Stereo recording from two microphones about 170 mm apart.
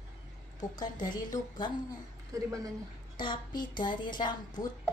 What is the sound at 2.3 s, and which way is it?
Speech, 20° right (ahead or behind).